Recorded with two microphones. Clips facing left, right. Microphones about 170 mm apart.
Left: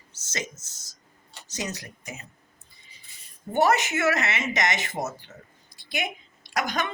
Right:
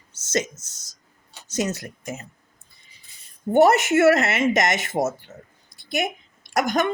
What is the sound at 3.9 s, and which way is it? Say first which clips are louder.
Speech: right 9 dB; 50° right (ahead or behind).